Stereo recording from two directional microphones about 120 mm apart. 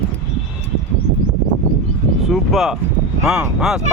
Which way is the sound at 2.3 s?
Centre (ahead or behind).